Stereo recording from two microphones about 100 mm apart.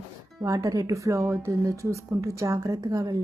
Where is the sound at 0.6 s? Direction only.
35° right (ahead or behind).